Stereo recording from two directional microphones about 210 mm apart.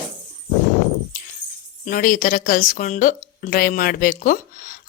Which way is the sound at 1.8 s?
40° left (ahead or behind).